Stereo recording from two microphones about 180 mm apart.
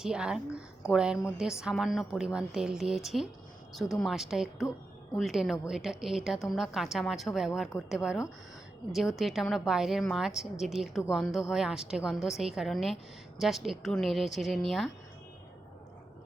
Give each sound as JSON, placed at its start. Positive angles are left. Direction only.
{"t": 0.0, "sound": "a woman's voice", "side_deg": -5}